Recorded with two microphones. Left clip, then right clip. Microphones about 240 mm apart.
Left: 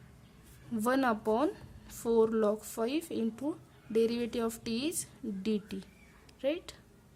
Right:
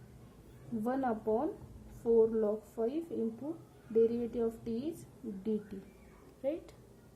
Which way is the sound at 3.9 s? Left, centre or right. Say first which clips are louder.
Even; left.